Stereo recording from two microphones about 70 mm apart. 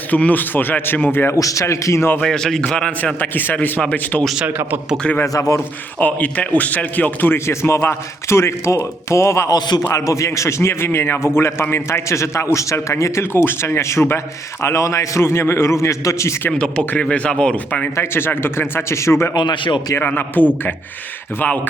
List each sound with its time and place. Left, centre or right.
0.1 s speech: left
1.4 s a man's voice: left
2.2 s a man's voice: centre
3.2 s speech: left
4.4 s speech: right
5.2 s a man's voice: left
5.5 s speech: left
9.5 s a man's voice: left
9.8 s speech: left
13.3 s speech: left
16.5 s a man's voice: centre
17.9 s speech: left
19.3 s a man's voice: left
20.0 s speech: left